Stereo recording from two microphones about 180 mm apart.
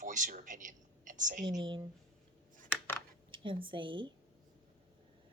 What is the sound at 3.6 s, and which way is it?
Speech, 30° right (ahead or behind).